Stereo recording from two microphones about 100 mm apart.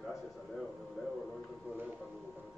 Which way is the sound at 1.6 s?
15° right (ahead or behind).